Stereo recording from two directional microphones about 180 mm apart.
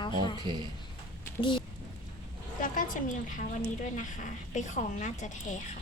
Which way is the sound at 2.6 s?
45° left (ahead or behind).